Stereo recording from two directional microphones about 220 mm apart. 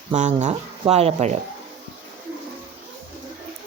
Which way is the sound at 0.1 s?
30° right (ahead or behind).